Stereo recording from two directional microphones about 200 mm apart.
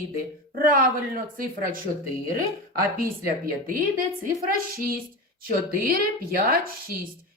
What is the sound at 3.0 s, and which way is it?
A woman's voice, 45° right (ahead or behind).